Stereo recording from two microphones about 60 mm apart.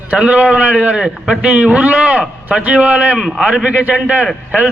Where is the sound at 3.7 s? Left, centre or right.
Right.